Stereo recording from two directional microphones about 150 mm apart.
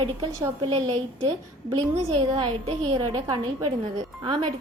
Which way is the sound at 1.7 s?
35° right (ahead or behind).